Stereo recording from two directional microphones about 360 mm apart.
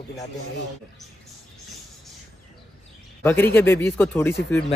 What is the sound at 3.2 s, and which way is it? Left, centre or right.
Speech, centre.